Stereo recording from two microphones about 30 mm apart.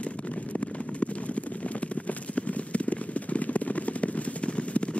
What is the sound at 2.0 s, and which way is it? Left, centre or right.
Run, left.